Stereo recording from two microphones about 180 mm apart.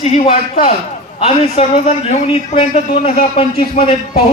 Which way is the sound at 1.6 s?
30° left (ahead or behind).